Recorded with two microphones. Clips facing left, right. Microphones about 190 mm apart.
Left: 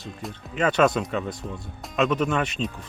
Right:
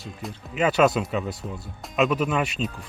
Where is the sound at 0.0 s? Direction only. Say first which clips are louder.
Even; 5° right (ahead or behind).